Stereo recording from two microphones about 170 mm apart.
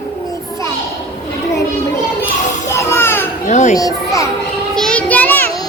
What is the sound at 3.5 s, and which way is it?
Speech, 45° left (ahead or behind).